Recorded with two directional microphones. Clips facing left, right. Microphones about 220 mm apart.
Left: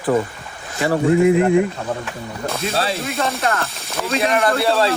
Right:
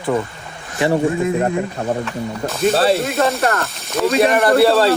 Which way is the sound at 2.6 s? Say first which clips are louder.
Right 9 dB; 30° right (ahead or behind).